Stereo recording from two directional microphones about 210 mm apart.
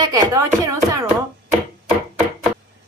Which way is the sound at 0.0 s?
15° right (ahead or behind).